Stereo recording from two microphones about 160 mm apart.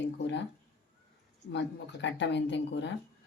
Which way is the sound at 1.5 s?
90° left.